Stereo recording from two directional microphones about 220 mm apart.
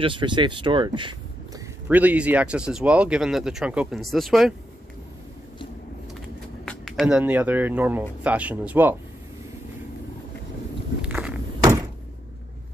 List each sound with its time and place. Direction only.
0.0 s speech: 20° right (ahead or behind)
1.9 s speech: 5° right (ahead or behind)
6.6 s speech: centre (ahead or behind)
11.0 s walk: 5° right (ahead or behind)